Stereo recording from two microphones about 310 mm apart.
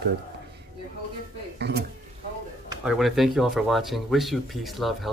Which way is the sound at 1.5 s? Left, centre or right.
Right.